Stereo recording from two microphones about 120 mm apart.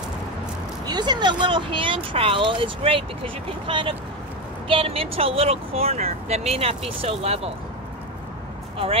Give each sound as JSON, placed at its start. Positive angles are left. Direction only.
{"t": 0.8, "sound": "speech", "side_deg": -35}